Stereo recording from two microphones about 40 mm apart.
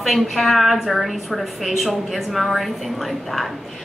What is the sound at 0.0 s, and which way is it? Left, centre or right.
A woman's voice, centre.